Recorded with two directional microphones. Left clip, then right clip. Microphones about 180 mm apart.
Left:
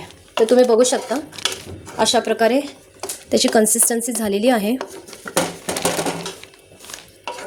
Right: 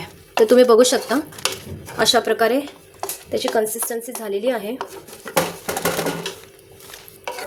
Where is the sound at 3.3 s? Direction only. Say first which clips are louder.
Left 5 dB; 40° left (ahead or behind).